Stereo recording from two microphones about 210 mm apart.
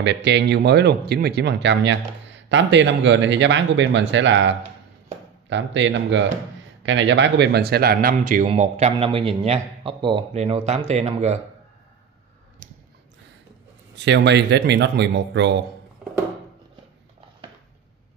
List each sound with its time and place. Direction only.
0.0 s a man's voice: 55° right (ahead or behind); by 11.3 s 30° right (ahead or behind)
13.9 s speech: 55° right (ahead or behind)